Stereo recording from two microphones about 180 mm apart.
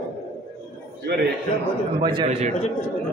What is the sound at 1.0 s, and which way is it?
Speech, 65° right (ahead or behind).